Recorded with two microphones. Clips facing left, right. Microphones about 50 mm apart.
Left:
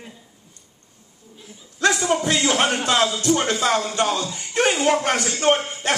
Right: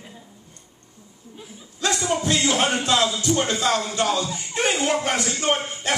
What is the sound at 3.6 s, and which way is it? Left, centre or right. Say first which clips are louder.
Speech: left 2 dB; centre.